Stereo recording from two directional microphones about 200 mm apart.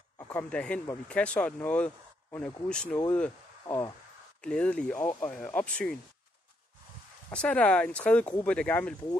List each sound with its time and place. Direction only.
0.2 s speech: 10° left (ahead or behind)
3.6 s speech: 15° left (ahead or behind)
4.4 s speech: 5° left (ahead or behind)
7.2 s speech: 5° left (ahead or behind)